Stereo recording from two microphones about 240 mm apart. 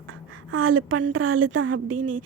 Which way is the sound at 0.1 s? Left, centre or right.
Right.